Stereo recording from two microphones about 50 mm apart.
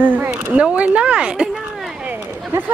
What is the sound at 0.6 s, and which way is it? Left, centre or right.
Speech, right.